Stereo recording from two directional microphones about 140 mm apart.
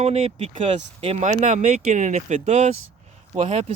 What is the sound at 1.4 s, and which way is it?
Speech, 55° right (ahead or behind).